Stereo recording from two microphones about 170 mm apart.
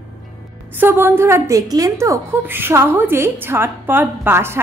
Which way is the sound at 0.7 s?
10° right (ahead or behind).